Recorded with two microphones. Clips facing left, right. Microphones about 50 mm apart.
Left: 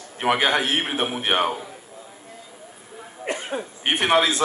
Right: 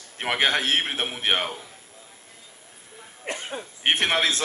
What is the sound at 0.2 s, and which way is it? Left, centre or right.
A man's voice, left.